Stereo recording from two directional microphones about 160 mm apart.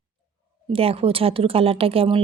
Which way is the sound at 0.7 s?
35° right (ahead or behind).